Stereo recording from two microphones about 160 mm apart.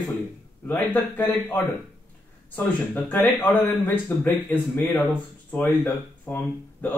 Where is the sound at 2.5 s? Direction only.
10° left (ahead or behind).